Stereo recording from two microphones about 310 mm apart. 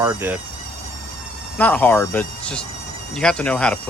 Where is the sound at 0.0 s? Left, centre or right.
Centre.